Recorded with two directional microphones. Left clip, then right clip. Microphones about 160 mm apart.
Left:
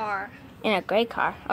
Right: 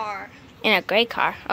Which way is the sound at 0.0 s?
60° left (ahead or behind).